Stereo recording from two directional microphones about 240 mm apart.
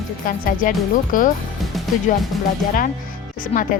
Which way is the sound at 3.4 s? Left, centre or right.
Left.